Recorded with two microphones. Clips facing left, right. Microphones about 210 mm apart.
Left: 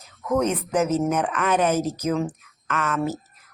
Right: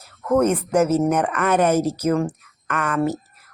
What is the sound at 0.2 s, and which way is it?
A woman's voice, 5° right (ahead or behind).